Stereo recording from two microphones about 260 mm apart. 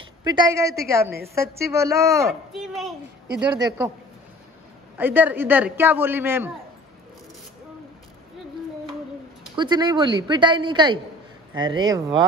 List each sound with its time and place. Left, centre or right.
0.2 s a man's voice: centre
2.2 s speech: centre
3.5 s a man's voice: centre
4.9 s a man's voice: centre
9.6 s a man's voice: centre